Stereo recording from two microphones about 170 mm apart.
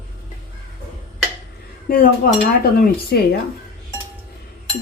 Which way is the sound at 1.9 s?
60° left (ahead or behind).